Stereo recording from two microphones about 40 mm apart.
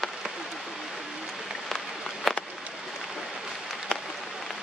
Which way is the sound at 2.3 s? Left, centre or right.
Centre.